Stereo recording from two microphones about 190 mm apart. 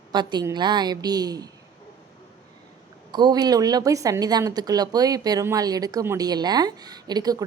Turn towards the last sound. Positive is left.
turn(degrees=-20)  # may be behind; listen again after turning